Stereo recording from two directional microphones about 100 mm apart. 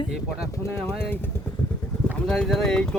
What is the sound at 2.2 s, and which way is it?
Speech, 5° left (ahead or behind).